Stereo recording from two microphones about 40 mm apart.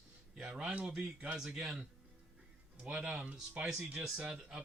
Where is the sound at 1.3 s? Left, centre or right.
Centre.